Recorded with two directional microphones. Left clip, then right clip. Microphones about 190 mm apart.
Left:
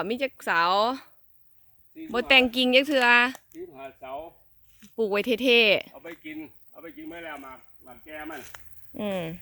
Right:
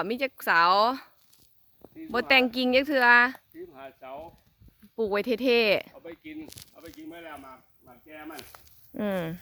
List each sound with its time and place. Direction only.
0.0 s speech: 5° right (ahead or behind)
3.8 s speech: 20° right (ahead or behind)
4.9 s speech: centre (ahead or behind)
5.9 s speech: 25° left (ahead or behind)
9.0 s speech: 25° right (ahead or behind)